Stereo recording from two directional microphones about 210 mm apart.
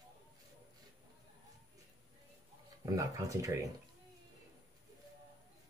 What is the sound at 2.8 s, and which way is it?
Speech, 15° right (ahead or behind).